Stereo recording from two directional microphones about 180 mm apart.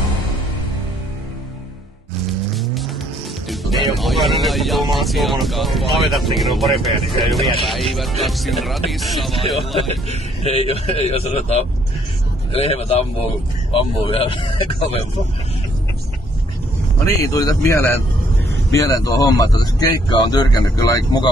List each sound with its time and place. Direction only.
2.5 s vehicle: centre (ahead or behind)
3.4 s speech: centre (ahead or behind)
10.4 s a man's voice: 35° left (ahead or behind)
17.0 s a man's voice: 20° left (ahead or behind)